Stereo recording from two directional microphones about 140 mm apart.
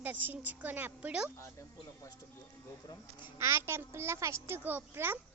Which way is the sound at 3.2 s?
20° right (ahead or behind).